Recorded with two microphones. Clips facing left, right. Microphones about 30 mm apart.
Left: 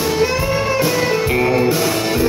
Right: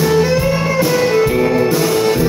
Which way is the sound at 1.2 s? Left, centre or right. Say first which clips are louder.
Right 2 dB; left.